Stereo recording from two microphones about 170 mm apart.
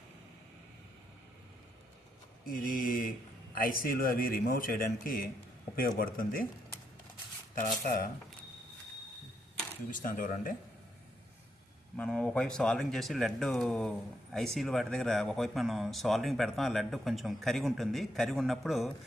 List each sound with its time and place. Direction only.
2.4 s speech: 55° left (ahead or behind)
7.5 s speech: 55° left (ahead or behind)
9.9 s speech: 50° left (ahead or behind)
11.9 s speech: 5° left (ahead or behind)